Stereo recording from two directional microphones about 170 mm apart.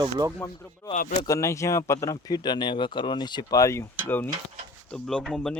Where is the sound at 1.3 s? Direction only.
15° left (ahead or behind).